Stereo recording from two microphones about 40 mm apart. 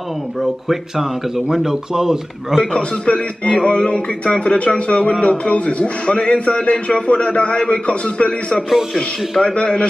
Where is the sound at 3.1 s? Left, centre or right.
Left.